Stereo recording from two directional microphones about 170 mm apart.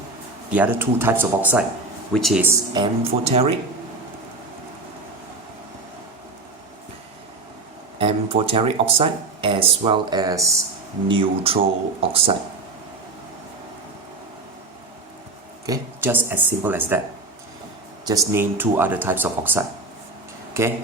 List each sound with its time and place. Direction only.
0.5 s speech: 10° right (ahead or behind)
2.1 s speech: centre (ahead or behind)
2.7 s speech: 30° right (ahead or behind)
7.9 s speech: 35° right (ahead or behind)
11.1 s speech: 30° right (ahead or behind)
15.6 s speech: 15° right (ahead or behind)
18.0 s speech: 20° right (ahead or behind)